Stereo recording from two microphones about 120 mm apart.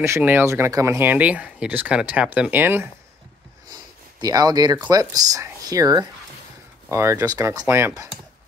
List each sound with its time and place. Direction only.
0.0 s speech: 20° right (ahead or behind)
4.2 s speech: 30° right (ahead or behind)
6.9 s speech: 20° right (ahead or behind)